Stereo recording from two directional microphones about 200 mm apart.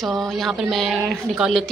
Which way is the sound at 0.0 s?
Centre (ahead or behind).